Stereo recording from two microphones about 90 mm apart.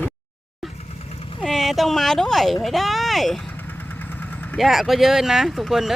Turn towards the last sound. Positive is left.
turn(degrees=-5)  # may be behind; listen again after turning